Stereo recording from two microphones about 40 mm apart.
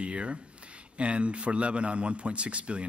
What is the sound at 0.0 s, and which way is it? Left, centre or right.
Speech, right.